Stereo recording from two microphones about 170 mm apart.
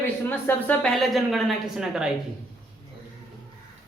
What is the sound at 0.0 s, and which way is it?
A woman's voice, 10° left (ahead or behind).